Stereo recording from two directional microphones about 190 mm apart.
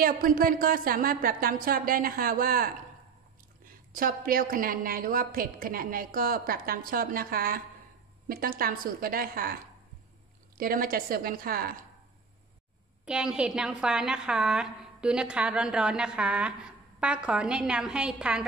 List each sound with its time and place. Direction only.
0.0 s a woman's voice: 50° right (ahead or behind)
10.6 s a woman's voice: 50° right (ahead or behind)
13.0 s a woman's voice: 5° right (ahead or behind)